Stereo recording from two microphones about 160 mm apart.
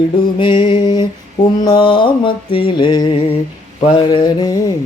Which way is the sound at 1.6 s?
30° left (ahead or behind).